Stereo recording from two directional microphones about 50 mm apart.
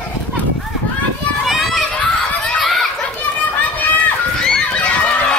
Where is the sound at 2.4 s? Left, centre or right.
Centre.